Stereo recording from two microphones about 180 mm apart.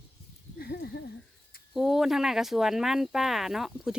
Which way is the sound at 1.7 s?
Centre (ahead or behind).